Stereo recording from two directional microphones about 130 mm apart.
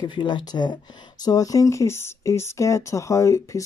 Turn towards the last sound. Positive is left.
turn(degrees=25)  # may be behind; listen again after turning